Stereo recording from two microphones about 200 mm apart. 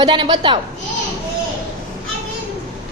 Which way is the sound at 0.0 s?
25° right (ahead or behind).